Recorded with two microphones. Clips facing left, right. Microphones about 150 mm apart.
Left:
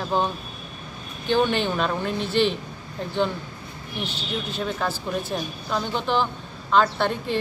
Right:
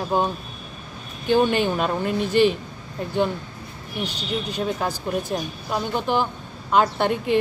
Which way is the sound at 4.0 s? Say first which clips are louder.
Right 3 dB; 15° right (ahead or behind).